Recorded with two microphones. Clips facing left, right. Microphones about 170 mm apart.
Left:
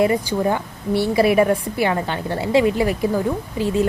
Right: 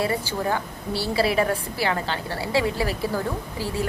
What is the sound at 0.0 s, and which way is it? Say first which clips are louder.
A woman's voice: left 7 dB; 20° left (ahead or behind).